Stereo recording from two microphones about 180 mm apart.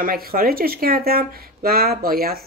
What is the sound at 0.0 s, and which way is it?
Speech, 55° right (ahead or behind).